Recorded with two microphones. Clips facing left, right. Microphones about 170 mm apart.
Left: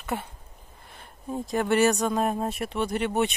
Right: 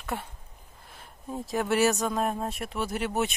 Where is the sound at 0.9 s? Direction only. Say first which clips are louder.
Left 3 dB; centre (ahead or behind).